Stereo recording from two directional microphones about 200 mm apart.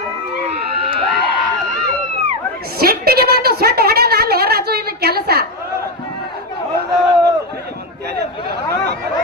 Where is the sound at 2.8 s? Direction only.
50° right (ahead or behind).